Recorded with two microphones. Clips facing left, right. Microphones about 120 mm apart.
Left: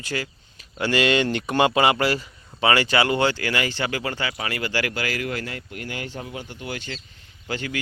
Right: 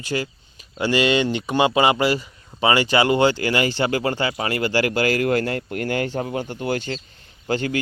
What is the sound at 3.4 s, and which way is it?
Speech, 30° right (ahead or behind).